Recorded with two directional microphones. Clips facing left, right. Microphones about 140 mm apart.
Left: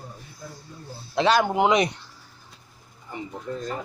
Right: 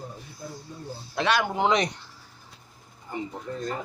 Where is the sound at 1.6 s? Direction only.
10° left (ahead or behind).